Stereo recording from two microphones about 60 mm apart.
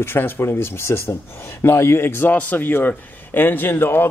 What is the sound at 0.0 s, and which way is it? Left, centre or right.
Speech, left.